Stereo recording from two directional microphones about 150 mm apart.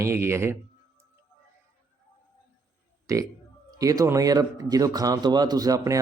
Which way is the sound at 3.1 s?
20° right (ahead or behind).